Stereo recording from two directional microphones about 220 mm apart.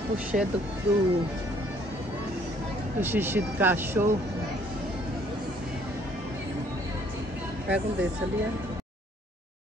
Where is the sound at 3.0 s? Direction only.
10° right (ahead or behind).